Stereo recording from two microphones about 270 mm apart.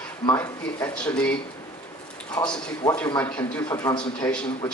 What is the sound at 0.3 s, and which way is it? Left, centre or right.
Speech, centre.